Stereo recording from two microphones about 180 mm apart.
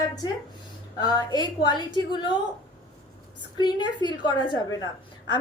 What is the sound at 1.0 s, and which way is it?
A woman's voice, 20° left (ahead or behind).